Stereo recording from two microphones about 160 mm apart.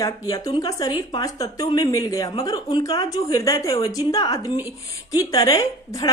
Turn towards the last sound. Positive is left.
turn(degrees=20)  # may be behind; listen again after turning